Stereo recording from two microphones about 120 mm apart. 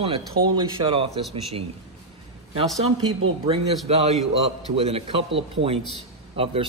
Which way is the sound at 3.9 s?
60° right (ahead or behind).